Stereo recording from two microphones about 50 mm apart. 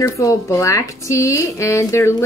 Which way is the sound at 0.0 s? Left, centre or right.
Left.